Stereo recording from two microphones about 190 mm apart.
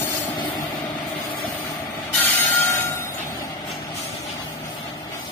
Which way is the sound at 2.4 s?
10° left (ahead or behind).